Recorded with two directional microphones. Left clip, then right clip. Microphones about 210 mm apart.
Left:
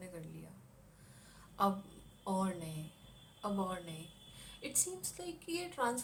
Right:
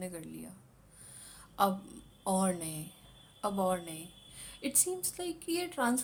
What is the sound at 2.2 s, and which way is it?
A woman's voice, 50° right (ahead or behind).